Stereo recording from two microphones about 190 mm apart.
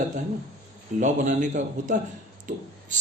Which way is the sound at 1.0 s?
40° right (ahead or behind).